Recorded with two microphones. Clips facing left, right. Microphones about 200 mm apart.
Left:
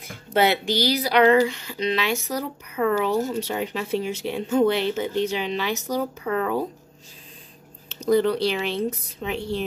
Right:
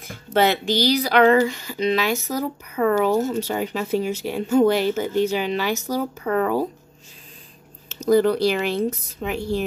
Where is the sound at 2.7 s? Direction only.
5° left (ahead or behind).